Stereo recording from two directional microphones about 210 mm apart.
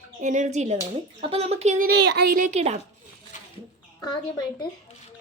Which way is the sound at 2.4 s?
35° right (ahead or behind).